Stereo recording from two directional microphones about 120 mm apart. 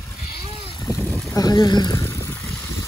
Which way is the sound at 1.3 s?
35° left (ahead or behind).